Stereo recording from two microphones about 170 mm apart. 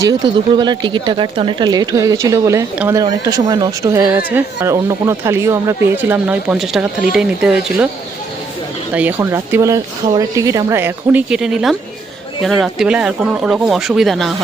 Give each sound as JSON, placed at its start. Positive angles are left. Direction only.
{"t": 0.0, "sound": "speech", "side_deg": -25}
{"t": 9.0, "sound": "speech", "side_deg": -10}